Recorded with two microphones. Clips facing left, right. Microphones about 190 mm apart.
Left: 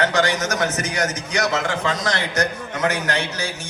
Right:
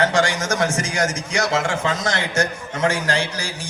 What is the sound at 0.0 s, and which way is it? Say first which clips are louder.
A man's voice: right 1 dB; 30° right (ahead or behind).